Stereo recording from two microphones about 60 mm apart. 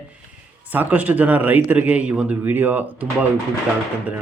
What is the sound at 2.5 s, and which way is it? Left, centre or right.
Speech, right.